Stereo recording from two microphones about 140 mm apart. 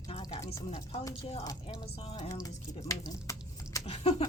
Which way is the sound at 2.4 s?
25° left (ahead or behind).